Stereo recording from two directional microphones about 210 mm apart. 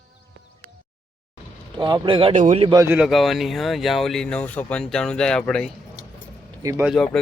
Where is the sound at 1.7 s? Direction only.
20° right (ahead or behind).